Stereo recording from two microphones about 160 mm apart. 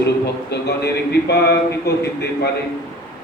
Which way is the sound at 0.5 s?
90° left.